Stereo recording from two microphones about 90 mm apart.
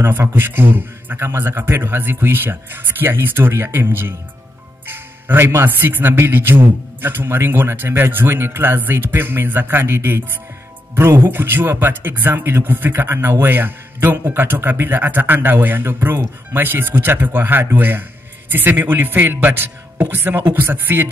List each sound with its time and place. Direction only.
0.0 s speech: 25° right (ahead or behind)